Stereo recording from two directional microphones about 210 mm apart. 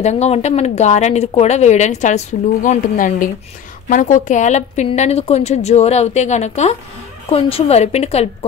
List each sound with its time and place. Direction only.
0.0 s a woman's voice: 30° left (ahead or behind)